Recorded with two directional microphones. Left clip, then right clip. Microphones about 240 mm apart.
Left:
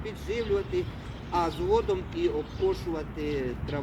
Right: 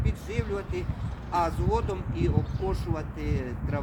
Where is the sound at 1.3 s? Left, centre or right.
Right.